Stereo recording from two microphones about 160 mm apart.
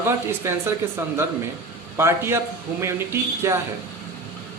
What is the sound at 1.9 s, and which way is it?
Speech, 15° right (ahead or behind).